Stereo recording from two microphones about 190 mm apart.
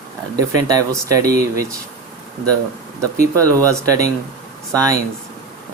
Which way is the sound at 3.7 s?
15° right (ahead or behind).